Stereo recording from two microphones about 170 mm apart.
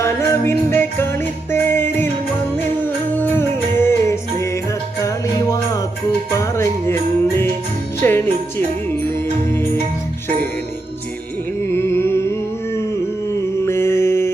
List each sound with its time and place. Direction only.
0.0 s music: 15° left (ahead or behind)
4.9 s jingle bell: 20° left (ahead or behind)
6.4 s music: 15° left (ahead or behind)
8.0 s jingle bell: 15° left (ahead or behind)
9.5 s music: 15° left (ahead or behind)
11.7 s music: 15° left (ahead or behind)
13.7 s mantra: 15° left (ahead or behind)